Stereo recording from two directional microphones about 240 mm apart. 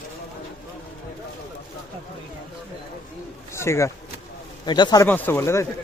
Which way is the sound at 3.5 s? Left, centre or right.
Centre.